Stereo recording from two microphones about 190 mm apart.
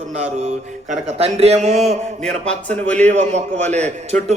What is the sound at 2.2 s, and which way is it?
Speech, 5° left (ahead or behind).